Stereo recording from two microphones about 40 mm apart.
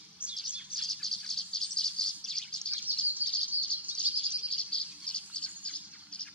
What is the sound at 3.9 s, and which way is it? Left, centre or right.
Bird, right.